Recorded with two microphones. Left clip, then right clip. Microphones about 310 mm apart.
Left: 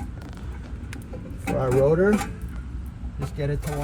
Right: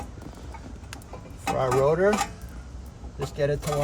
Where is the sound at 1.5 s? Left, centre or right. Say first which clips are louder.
Left 2 dB; left.